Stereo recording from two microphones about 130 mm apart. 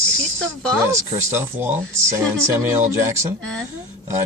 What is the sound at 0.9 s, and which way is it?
Speech, 20° right (ahead or behind).